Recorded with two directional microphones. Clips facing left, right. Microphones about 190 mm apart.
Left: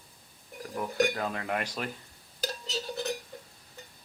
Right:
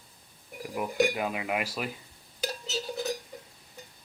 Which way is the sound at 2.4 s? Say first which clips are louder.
Right 1 dB; centre (ahead or behind).